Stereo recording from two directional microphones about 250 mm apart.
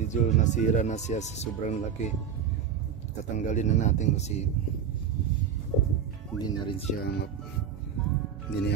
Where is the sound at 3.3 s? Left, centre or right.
Left.